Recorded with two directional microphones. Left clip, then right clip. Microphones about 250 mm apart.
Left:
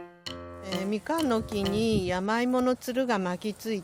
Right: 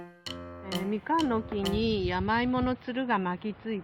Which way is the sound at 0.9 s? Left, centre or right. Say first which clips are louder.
Even; left.